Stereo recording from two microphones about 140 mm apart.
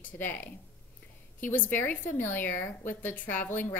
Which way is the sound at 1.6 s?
15° left (ahead or behind).